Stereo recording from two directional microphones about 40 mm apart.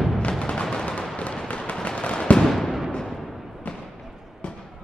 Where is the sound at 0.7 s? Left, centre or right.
Left.